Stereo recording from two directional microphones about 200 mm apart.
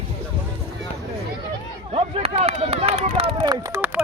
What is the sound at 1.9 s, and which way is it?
Run, 30° right (ahead or behind).